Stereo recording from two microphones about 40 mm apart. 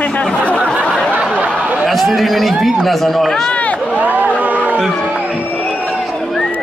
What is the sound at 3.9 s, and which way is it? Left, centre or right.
Speech, right.